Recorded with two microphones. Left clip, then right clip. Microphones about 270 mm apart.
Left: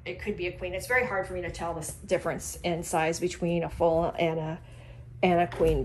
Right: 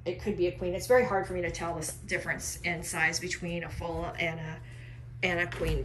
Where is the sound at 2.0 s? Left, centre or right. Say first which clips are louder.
Left 4 dB; centre.